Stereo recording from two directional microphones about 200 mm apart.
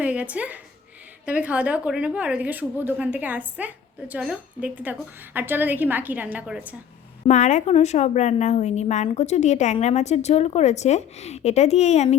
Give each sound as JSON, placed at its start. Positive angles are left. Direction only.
{"t": 0.0, "sound": "a woman's voice", "side_deg": -5}
{"t": 7.3, "sound": "a woman's voice", "side_deg": 35}